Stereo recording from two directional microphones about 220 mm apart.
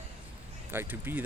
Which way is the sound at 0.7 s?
10° right (ahead or behind).